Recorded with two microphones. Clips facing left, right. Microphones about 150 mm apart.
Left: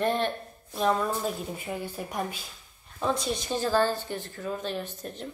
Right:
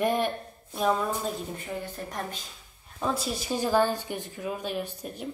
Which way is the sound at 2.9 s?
5° right (ahead or behind).